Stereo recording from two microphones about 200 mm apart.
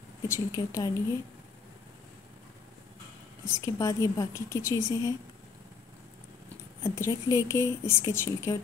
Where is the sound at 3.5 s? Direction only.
15° left (ahead or behind).